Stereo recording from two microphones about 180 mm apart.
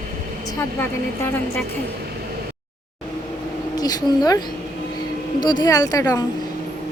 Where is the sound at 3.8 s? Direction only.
20° left (ahead or behind).